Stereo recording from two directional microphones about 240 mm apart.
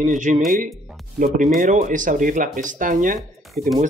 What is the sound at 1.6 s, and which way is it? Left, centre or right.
Speech, right.